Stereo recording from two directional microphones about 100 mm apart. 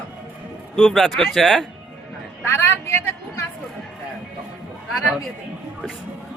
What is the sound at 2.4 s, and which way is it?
Vehicle, 20° left (ahead or behind).